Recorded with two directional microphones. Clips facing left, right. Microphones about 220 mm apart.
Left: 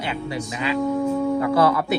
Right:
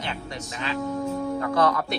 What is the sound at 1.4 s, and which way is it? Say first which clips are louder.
Speech: left 1 dB; 5° left (ahead or behind).